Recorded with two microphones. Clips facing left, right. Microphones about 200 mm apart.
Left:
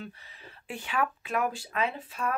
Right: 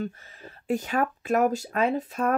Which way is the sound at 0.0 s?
45° right (ahead or behind).